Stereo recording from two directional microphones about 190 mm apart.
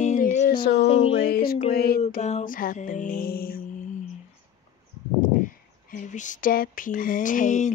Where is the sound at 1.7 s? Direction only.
55° left (ahead or behind).